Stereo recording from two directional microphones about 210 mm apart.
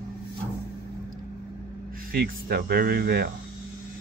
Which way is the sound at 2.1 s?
45° right (ahead or behind).